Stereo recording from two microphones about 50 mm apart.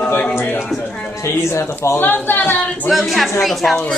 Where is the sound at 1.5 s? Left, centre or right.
Left.